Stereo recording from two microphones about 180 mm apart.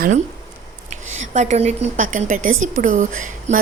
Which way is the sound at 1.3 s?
40° right (ahead or behind).